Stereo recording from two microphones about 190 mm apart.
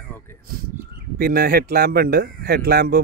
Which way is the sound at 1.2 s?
50° right (ahead or behind).